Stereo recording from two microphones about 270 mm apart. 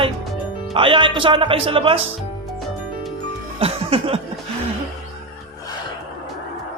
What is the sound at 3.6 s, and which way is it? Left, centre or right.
Music, right.